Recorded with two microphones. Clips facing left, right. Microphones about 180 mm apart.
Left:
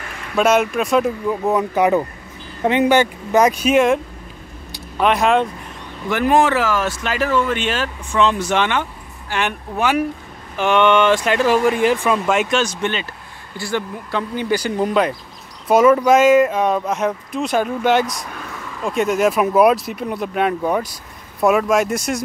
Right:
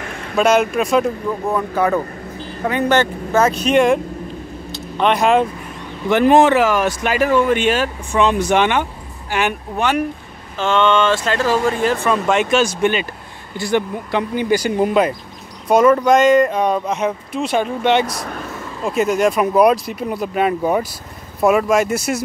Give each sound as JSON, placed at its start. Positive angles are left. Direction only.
{"t": 0.4, "sound": "speech", "side_deg": 0}
{"t": 1.5, "sound": "speech", "side_deg": 15}
{"t": 6.0, "sound": "speech", "side_deg": -25}
{"t": 9.8, "sound": "speech", "side_deg": 5}
{"t": 10.6, "sound": "speech", "side_deg": 15}
{"t": 15.7, "sound": "speech", "side_deg": 5}
{"t": 18.1, "sound": "speech", "side_deg": -50}
{"t": 18.9, "sound": "speech", "side_deg": 0}